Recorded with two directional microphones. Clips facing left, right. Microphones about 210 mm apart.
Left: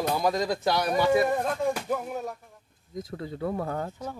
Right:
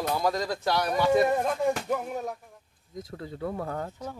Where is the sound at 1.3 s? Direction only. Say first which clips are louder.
Right 1 dB; 5° right (ahead or behind).